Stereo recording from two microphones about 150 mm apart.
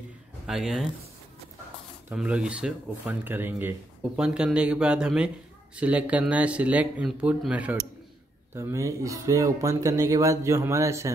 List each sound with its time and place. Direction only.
0.5 s speech: centre (ahead or behind)
2.0 s speech: 10° right (ahead or behind)
8.5 s speech: 20° right (ahead or behind)